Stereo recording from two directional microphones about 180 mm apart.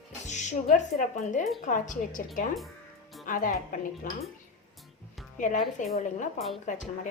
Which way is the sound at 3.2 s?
50° left (ahead or behind).